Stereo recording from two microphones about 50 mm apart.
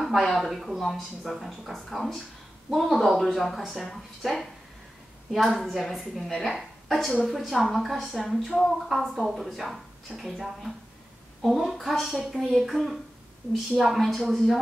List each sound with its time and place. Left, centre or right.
0.3 s a woman's voice: centre
11.4 s speech: centre